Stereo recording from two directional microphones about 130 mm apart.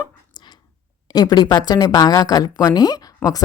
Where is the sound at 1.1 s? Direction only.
30° left (ahead or behind).